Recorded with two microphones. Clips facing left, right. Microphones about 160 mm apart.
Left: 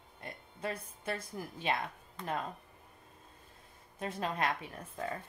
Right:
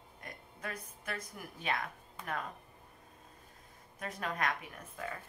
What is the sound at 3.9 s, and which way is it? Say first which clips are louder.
Speech: left 3 dB; 30° left (ahead or behind).